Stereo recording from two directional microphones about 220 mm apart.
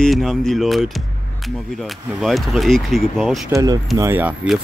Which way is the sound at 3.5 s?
15° right (ahead or behind).